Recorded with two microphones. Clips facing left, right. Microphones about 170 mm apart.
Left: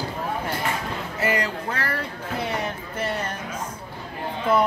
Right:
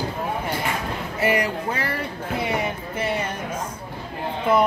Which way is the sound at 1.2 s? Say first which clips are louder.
Right 3 dB; 15° right (ahead or behind).